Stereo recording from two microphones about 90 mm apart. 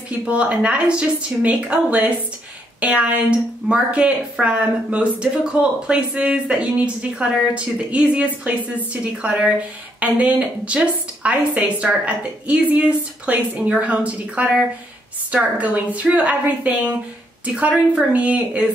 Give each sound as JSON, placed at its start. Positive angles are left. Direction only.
{"t": 0.2, "sound": "a woman's voice", "side_deg": -15}